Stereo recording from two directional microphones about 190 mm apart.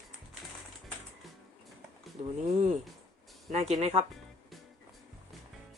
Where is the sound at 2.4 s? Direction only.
35° right (ahead or behind).